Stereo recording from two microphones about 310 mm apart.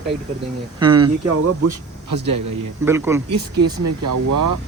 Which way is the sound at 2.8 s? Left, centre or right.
Centre.